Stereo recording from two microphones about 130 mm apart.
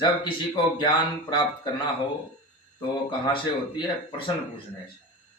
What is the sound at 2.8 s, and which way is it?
A man's voice, 35° left (ahead or behind).